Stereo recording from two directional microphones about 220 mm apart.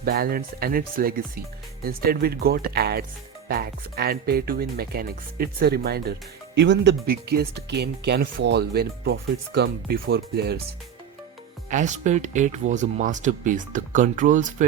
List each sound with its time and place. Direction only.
0.0 s speech: 40° right (ahead or behind)
11.7 s speech: 35° right (ahead or behind)